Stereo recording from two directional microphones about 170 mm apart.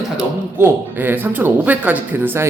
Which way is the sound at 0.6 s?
10° right (ahead or behind).